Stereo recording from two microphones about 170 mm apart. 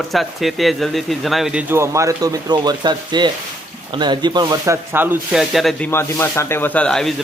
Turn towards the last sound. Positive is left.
turn(degrees=5)  # may be behind; listen again after turning